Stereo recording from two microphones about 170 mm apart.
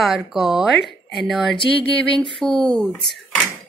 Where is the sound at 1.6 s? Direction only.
30° left (ahead or behind).